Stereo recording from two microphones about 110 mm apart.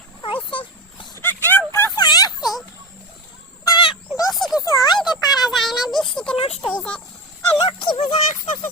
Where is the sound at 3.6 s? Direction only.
50° left (ahead or behind).